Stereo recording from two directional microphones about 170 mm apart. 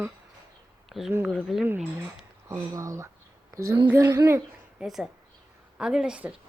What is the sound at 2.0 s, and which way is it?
A woman's voice, 20° right (ahead or behind).